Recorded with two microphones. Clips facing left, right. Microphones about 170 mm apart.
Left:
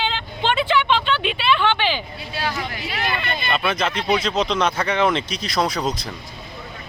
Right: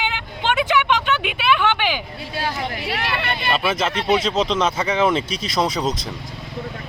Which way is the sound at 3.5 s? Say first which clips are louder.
Even; centre (ahead or behind).